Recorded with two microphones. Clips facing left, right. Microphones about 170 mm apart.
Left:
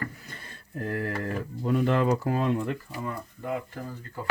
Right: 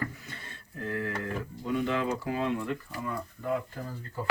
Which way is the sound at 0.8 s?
45° left (ahead or behind).